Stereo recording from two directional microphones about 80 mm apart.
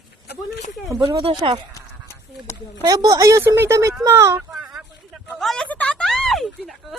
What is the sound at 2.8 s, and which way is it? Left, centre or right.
A woman's voice, right.